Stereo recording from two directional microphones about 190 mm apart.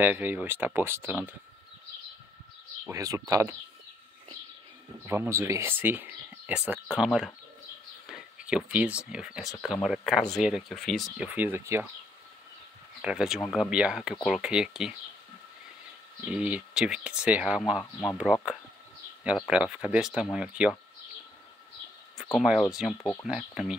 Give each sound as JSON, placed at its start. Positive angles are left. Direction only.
{"t": 0.0, "sound": "speech", "side_deg": -10}
{"t": 2.9, "sound": "speech", "side_deg": -15}
{"t": 5.0, "sound": "speech", "side_deg": -15}
{"t": 13.0, "sound": "speech", "side_deg": -5}
{"t": 16.3, "sound": "speech", "side_deg": -5}
{"t": 22.1, "sound": "speech", "side_deg": 0}